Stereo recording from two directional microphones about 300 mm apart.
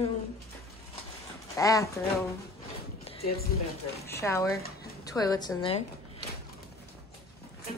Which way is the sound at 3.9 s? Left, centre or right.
Centre.